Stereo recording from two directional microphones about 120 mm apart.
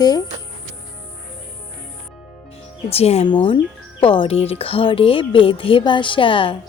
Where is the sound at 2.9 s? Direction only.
60° left (ahead or behind).